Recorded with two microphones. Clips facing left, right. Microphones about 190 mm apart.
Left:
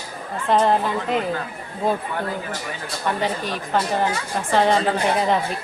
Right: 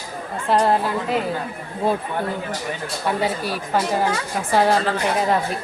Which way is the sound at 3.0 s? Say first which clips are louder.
Right 1 dB; 10° right (ahead or behind).